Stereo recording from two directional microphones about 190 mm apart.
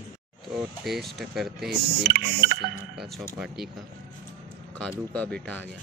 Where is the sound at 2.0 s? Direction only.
50° right (ahead or behind).